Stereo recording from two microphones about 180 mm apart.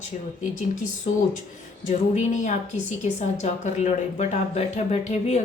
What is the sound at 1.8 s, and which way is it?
A woman's voice, 45° left (ahead or behind).